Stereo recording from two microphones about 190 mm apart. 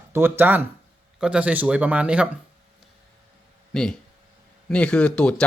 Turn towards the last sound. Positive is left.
turn(degrees=5)  # may be behind; listen again after turning